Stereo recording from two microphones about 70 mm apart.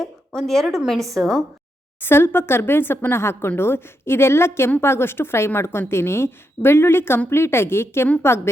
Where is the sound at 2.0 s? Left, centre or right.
Left.